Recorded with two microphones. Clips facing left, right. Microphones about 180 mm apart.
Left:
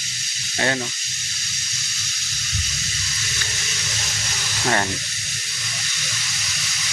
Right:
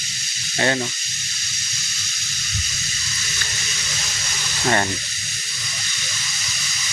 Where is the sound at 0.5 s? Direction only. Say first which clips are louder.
Right 2 dB; centre (ahead or behind).